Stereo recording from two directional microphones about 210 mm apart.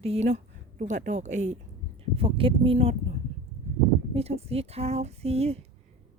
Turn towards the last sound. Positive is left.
turn(degrees=-30)  # may be behind; listen again after turning